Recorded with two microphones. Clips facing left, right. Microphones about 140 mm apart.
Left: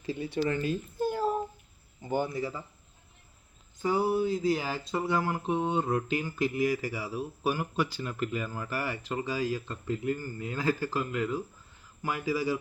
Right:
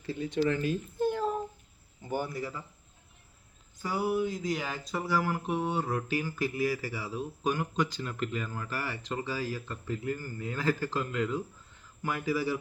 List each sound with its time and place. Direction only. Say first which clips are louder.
0.0 s speech: left 1 dB; 15° left (ahead or behind)
0.6 s a child's voice: right 1 dB; 5° left (ahead or behind)
2.0 s speech: left 3 dB; 20° left (ahead or behind)
3.8 s speech: left 3 dB; 25° left (ahead or behind)